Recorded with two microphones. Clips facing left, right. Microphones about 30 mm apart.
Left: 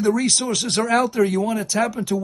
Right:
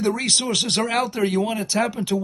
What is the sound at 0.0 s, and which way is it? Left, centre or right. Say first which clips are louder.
Speech: left 2 dB; right.